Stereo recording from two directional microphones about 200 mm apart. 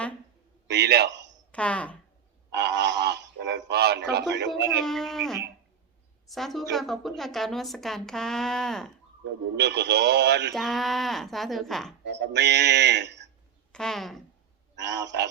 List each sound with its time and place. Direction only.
0.7 s a man's voice: 55° right (ahead or behind)
1.5 s speech: 5° left (ahead or behind)
2.5 s a sound: 60° right (ahead or behind)
4.9 s a woman's voice: centre (ahead or behind)
9.6 s a man's voice: 55° right (ahead or behind)
10.5 s a woman's voice: centre (ahead or behind)
12.0 s a man's voice: 60° right (ahead or behind)
13.7 s a woman's voice: centre (ahead or behind)
14.8 s a man's voice: 60° right (ahead or behind)